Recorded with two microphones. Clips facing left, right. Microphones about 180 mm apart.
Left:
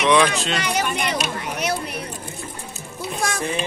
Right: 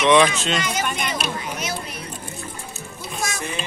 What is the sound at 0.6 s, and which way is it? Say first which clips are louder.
Speech: left 2 dB; 65° left (ahead or behind).